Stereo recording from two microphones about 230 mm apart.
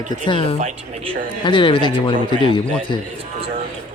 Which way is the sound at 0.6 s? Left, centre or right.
Right.